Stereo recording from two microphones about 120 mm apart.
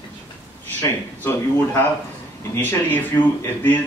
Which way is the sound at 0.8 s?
20° left (ahead or behind).